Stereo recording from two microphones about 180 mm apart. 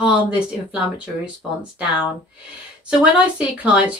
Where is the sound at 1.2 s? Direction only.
5° right (ahead or behind).